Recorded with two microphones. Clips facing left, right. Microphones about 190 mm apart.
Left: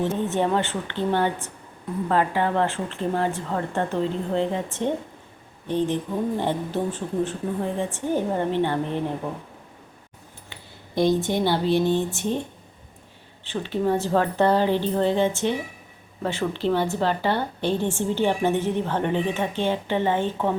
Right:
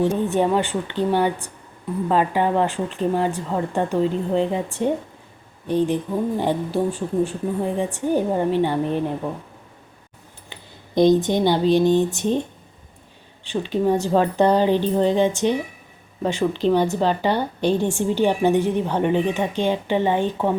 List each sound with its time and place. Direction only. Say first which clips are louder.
0.0 s a woman's voice: right 4 dB; 15° right (ahead or behind)
10.5 s speech: right 5 dB; 20° right (ahead or behind)
13.4 s a woman's voice: right 3 dB; 15° right (ahead or behind)